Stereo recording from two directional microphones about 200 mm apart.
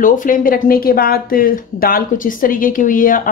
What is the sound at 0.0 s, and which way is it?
Speech, 40° left (ahead or behind).